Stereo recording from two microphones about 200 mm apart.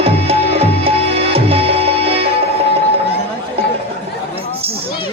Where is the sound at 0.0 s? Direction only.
30° right (ahead or behind).